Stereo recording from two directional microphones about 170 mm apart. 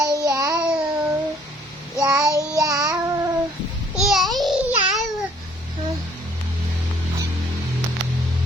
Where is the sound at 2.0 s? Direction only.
20° right (ahead or behind).